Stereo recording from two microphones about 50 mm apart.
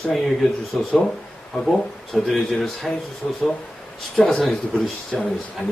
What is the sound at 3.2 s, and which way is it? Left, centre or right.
Speech, left.